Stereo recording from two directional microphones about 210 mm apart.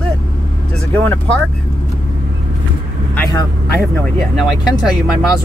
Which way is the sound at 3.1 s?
10° left (ahead or behind).